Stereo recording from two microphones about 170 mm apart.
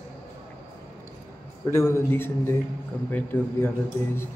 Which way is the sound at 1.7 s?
15° left (ahead or behind).